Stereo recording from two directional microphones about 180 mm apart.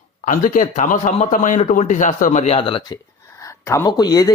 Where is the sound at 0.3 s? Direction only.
45° left (ahead or behind).